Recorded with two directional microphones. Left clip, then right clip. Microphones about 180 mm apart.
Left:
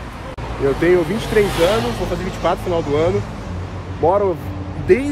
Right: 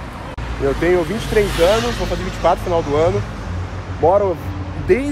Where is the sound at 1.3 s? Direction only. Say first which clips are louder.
Even; 45° left (ahead or behind).